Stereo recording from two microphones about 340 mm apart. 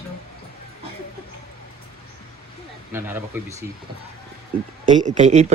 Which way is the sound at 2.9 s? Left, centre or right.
Centre.